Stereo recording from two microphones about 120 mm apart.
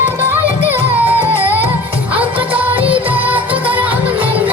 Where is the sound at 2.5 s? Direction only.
10° right (ahead or behind).